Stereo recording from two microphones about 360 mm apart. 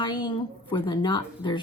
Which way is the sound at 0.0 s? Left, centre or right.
Centre.